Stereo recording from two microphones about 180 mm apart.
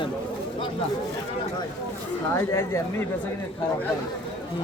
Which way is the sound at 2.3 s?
15° left (ahead or behind).